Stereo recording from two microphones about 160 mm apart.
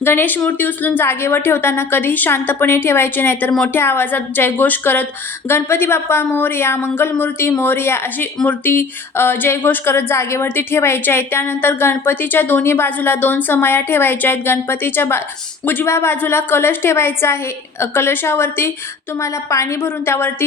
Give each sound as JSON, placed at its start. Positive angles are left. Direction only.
{"t": 0.0, "sound": "speech", "side_deg": 10}